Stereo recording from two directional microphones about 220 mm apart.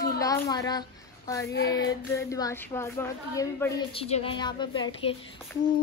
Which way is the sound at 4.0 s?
25° left (ahead or behind).